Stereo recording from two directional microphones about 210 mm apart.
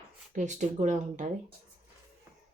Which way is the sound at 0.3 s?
35° right (ahead or behind).